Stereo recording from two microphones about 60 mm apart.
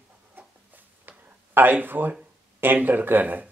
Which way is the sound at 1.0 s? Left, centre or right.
Right.